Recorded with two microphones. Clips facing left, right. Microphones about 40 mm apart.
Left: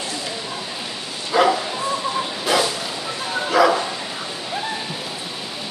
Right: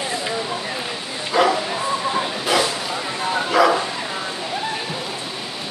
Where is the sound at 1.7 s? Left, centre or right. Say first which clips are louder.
Right 1 dB; centre.